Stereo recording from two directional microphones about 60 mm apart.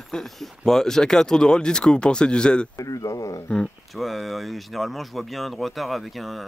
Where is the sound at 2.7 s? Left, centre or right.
Left.